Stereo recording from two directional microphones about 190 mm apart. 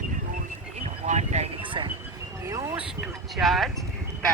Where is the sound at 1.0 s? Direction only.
35° right (ahead or behind).